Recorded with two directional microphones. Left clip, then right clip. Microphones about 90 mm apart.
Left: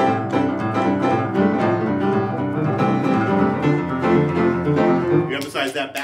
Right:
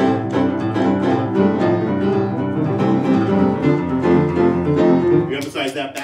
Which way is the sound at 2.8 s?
5° left (ahead or behind).